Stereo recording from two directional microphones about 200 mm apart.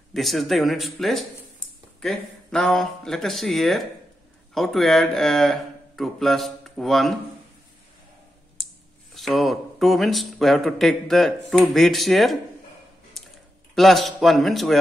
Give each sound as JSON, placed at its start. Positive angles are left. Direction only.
{"t": 0.1, "sound": "speech", "side_deg": 0}
{"t": 8.6, "sound": "clicking", "side_deg": 0}
{"t": 9.1, "sound": "speech", "side_deg": 0}
{"t": 13.2, "sound": "a sound", "side_deg": 0}
{"t": 13.7, "sound": "speech", "side_deg": 0}